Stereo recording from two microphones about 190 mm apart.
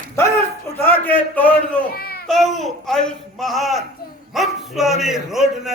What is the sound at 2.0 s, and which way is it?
Baby cry, 55° left (ahead or behind).